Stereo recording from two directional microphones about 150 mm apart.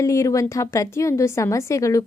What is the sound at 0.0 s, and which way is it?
A woman's voice, 20° left (ahead or behind).